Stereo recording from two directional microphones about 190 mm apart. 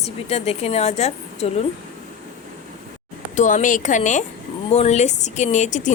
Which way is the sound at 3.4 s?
40° left (ahead or behind).